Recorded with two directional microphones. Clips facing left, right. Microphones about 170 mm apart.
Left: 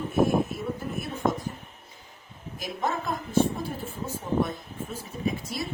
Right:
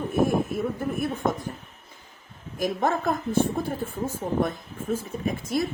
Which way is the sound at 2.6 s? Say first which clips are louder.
Right 6 dB; 50° right (ahead or behind).